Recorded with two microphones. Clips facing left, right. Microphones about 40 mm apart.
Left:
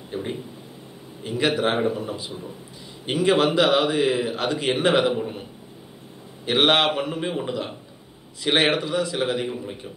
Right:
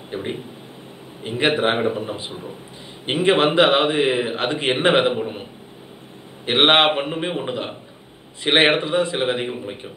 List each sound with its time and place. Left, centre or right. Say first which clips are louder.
0.1 s a man's voice: right 2 dB; right